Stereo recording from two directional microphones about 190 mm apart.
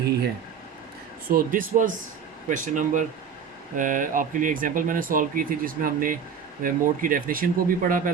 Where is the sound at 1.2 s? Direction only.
50° right (ahead or behind).